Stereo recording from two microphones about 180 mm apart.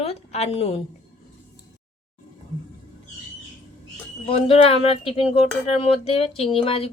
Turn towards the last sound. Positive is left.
turn(degrees=30)  # may be behind; listen again after turning